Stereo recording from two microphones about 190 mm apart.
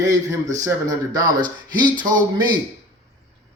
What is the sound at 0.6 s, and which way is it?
Speech, 20° right (ahead or behind).